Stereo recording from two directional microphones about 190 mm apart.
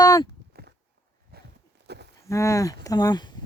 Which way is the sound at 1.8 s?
60° right (ahead or behind).